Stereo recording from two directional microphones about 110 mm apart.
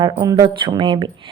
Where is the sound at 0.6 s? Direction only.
45° right (ahead or behind).